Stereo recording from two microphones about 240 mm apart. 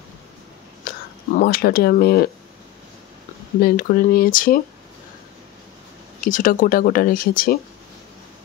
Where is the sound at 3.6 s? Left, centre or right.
Left.